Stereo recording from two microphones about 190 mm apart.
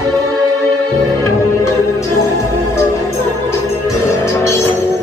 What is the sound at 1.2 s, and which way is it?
Music, 15° left (ahead or behind).